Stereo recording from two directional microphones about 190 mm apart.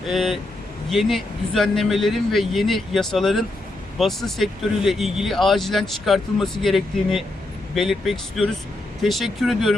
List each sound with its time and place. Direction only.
0.1 s speech: centre (ahead or behind)